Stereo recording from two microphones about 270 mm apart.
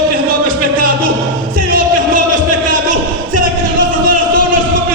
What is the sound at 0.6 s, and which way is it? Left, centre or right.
Music, right.